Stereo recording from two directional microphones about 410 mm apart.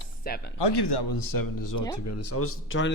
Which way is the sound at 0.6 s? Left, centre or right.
Left.